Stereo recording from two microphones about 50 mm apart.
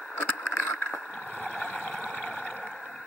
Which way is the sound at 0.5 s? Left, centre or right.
Left.